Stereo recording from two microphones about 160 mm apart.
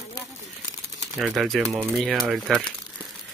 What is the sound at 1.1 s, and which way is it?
Speech, centre (ahead or behind).